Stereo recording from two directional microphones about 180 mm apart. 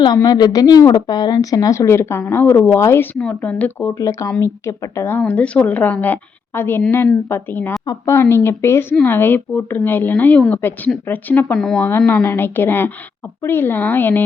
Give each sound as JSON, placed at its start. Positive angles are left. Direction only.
{"t": 0.0, "sound": "a woman's voice", "side_deg": 20}